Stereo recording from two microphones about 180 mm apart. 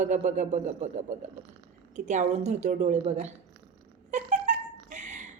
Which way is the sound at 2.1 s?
40° right (ahead or behind).